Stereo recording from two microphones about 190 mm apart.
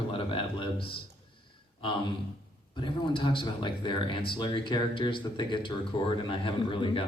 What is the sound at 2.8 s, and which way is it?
Speech, 25° left (ahead or behind).